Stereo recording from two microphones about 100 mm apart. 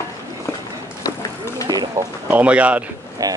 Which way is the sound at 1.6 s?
45° right (ahead or behind).